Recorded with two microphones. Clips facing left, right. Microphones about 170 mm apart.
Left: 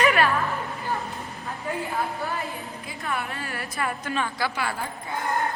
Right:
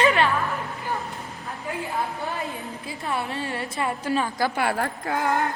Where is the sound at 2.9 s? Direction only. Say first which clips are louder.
Right 2 dB; 25° right (ahead or behind); by 5.5 s 70° right (ahead or behind).